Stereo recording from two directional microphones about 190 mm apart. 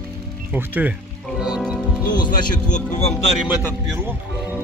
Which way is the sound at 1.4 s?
5° right (ahead or behind).